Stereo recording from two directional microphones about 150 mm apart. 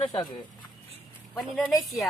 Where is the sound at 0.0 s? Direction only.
30° left (ahead or behind).